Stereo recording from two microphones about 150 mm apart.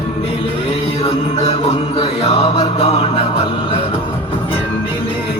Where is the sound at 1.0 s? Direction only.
45° left (ahead or behind).